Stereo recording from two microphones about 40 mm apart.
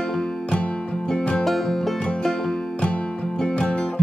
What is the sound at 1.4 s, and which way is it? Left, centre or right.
Music, centre.